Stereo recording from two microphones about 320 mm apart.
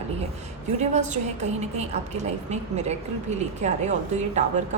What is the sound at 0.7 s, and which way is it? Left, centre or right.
A woman's voice, right.